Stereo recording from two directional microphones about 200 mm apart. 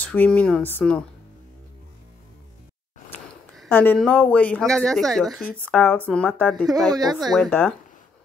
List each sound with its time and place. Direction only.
0.0 s speech: 5° left (ahead or behind)
3.5 s speech: 10° left (ahead or behind)
6.9 s speech: 20° right (ahead or behind)
7.3 s speech: 5° left (ahead or behind)